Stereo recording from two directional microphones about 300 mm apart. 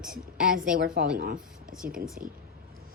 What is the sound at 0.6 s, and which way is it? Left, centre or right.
Speech, right.